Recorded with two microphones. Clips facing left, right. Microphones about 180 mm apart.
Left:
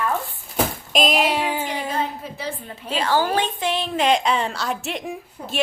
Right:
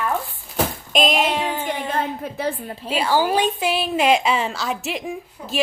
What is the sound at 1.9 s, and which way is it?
Speech, 55° right (ahead or behind).